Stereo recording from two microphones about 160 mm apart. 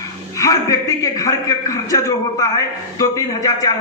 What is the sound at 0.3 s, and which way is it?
A man's voice, 20° left (ahead or behind).